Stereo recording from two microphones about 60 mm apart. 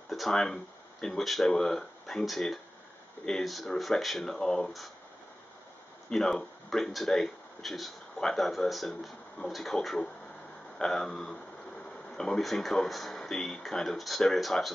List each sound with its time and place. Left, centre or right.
0.1 s speech: centre
6.0 s speech: centre